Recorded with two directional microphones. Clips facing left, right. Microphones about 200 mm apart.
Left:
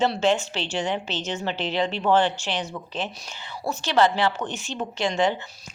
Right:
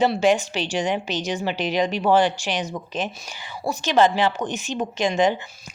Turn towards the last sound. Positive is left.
turn(degrees=-15)  # may be behind; listen again after turning